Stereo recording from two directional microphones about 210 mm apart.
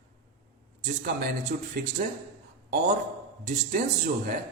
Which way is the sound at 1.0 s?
50° right (ahead or behind).